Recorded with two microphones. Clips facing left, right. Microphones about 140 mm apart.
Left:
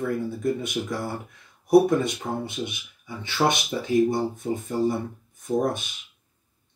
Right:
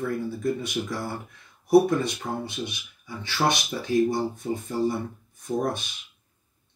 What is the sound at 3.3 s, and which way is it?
Speech, 20° left (ahead or behind).